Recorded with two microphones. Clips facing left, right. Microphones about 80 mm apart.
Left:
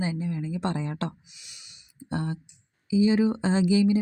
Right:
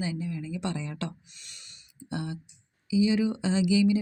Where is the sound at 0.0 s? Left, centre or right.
Left.